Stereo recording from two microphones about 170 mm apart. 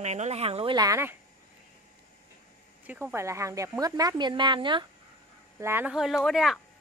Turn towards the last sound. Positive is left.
turn(degrees=0)  # may be behind; listen again after turning